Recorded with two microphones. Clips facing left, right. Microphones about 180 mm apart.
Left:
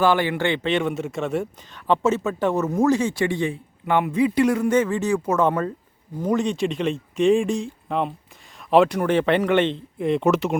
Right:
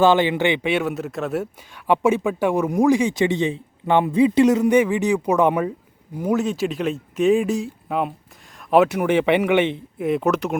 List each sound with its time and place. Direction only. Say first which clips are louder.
0.0 s a man's voice: right 3 dB; 20° right (ahead or behind); by 10.6 s centre (ahead or behind)